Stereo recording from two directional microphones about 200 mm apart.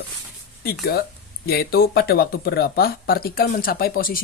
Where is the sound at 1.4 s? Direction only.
50° left (ahead or behind).